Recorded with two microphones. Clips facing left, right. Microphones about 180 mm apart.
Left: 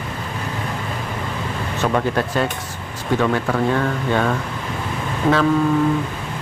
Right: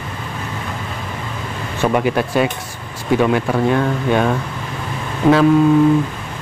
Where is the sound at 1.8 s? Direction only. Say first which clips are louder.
Right 3 dB; 10° right (ahead or behind).